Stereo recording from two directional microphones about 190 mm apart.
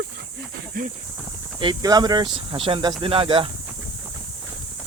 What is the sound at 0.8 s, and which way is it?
Speech, 50° right (ahead or behind).